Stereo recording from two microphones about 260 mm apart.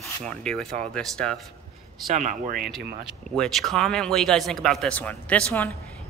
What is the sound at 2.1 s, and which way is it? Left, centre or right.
Speech, right.